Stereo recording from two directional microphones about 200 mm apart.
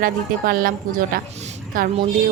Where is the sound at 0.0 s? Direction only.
45° right (ahead or behind).